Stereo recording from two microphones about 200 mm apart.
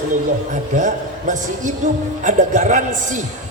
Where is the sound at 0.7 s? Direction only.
40° right (ahead or behind).